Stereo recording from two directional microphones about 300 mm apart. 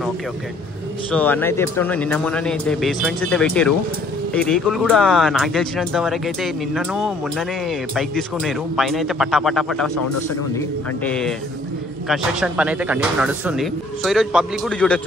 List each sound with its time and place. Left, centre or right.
1.1 s speech: centre
11.1 s speech: centre